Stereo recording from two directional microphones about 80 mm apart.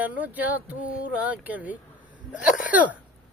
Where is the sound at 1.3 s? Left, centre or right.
Centre.